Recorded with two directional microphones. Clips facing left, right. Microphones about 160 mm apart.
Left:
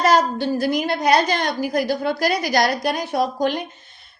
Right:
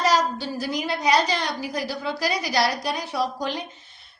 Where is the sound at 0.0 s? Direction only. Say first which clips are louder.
Left 5 dB; 55° left (ahead or behind).